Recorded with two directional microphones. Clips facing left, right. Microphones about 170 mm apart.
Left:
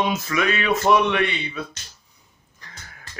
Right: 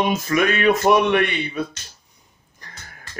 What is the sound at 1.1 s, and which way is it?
Speech, 45° right (ahead or behind).